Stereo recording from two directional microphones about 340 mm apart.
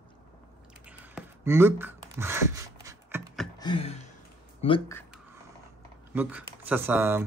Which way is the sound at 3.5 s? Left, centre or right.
Centre.